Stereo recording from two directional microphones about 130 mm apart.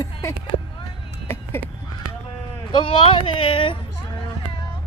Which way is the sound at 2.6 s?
35° left (ahead or behind).